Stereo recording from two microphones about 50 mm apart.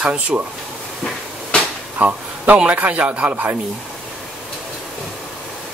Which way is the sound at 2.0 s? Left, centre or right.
Right.